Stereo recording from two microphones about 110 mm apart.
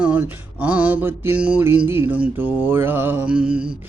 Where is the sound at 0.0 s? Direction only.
15° right (ahead or behind).